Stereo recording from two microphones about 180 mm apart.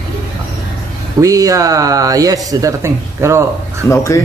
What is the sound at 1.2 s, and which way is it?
Speech, 20° right (ahead or behind).